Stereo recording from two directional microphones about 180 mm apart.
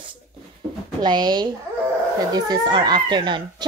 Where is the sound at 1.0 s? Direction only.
25° right (ahead or behind).